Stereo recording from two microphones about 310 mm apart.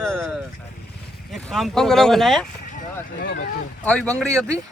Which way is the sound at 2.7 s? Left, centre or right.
Left.